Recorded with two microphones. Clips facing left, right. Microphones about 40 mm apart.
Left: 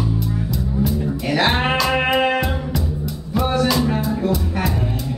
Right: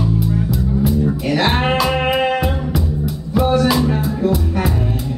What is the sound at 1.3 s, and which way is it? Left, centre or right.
Music, centre.